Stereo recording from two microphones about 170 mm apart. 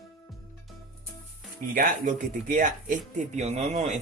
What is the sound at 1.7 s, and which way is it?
Speech, 50° right (ahead or behind).